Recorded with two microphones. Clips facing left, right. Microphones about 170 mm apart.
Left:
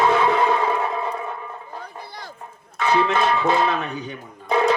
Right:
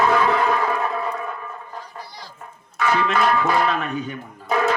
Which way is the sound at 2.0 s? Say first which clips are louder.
Left 2 dB; 55° left (ahead or behind).